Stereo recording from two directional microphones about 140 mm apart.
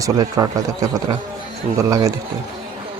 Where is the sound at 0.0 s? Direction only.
25° right (ahead or behind).